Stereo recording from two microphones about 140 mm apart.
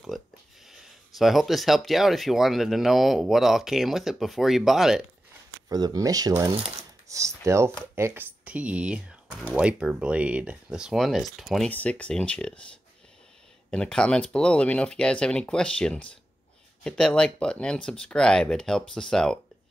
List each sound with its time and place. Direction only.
0.1 s a sound: centre (ahead or behind)
0.7 s speech: centre (ahead or behind)
5.7 s speech: 25° right (ahead or behind); by 11.7 s centre (ahead or behind)
11.7 s speech: 10° left (ahead or behind)
13.7 s speech: 5° left (ahead or behind)